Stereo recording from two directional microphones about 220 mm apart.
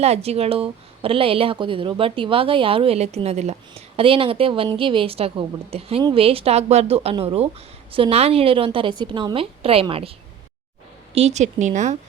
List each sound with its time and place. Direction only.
0.0 s a woman's voice: 30° right (ahead or behind)